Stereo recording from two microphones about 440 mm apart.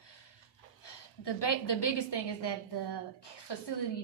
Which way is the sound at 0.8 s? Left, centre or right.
Left.